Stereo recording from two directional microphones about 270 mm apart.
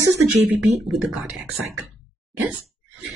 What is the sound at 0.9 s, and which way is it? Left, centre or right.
Speech, centre.